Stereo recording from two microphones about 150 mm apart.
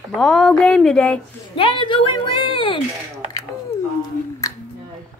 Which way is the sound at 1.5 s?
35° left (ahead or behind).